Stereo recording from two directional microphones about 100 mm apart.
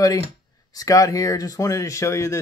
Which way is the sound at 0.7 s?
35° left (ahead or behind).